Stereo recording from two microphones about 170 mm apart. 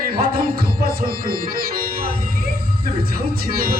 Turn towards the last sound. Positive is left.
turn(degrees=-60)  # may be behind; listen again after turning